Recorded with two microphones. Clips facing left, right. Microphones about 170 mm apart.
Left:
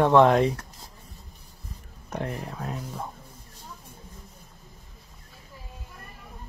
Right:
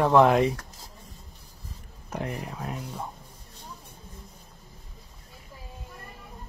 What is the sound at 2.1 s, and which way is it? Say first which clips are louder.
Speech: left 1 dB; 10° right (ahead or behind).